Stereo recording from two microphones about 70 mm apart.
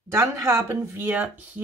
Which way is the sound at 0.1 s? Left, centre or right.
Right.